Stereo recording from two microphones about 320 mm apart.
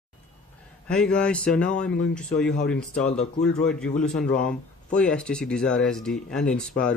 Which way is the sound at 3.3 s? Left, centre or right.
Centre.